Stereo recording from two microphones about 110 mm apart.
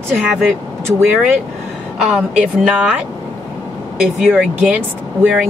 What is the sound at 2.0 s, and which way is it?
Speech, 5° right (ahead or behind).